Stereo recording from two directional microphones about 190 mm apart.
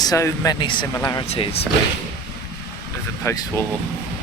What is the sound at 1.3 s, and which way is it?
Speech, 30° left (ahead or behind).